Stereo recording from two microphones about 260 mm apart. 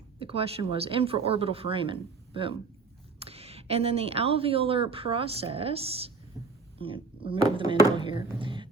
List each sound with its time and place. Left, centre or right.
0.2 s speech: right